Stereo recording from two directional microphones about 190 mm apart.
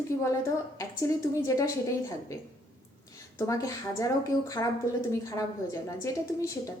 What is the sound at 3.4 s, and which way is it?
Speech, 15° left (ahead or behind).